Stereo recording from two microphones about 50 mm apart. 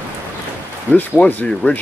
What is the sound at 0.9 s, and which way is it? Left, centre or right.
Speech, left.